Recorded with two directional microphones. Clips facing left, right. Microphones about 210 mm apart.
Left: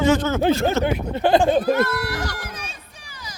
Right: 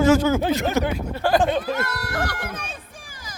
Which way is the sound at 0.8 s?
25° left (ahead or behind).